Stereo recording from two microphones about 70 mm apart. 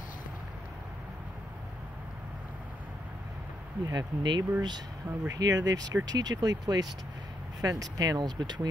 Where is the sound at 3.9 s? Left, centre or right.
Right.